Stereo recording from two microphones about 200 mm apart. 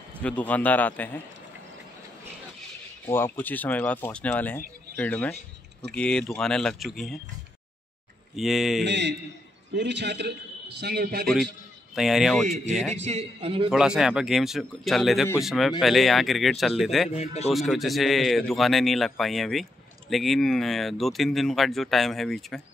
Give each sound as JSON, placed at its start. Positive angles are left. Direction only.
{"t": 0.2, "sound": "speech", "side_deg": 5}
{"t": 3.1, "sound": "speech", "side_deg": 10}
{"t": 8.4, "sound": "speech", "side_deg": 0}
{"t": 8.8, "sound": "a man's voice", "side_deg": -60}
{"t": 11.9, "sound": "speech", "side_deg": 0}
{"t": 12.9, "sound": "a man's voice", "side_deg": -35}
{"t": 13.7, "sound": "speech", "side_deg": -5}
{"t": 17.1, "sound": "speech", "side_deg": 30}
{"t": 17.5, "sound": "speech", "side_deg": 0}